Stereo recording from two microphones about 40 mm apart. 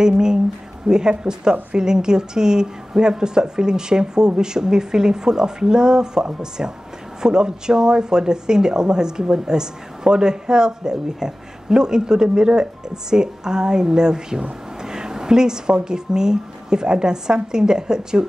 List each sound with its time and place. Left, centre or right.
0.0 s a woman's voice: centre